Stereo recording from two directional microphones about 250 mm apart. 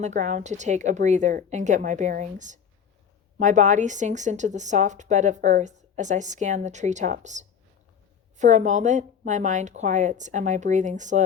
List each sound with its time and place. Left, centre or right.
0.0 s a woman's voice: right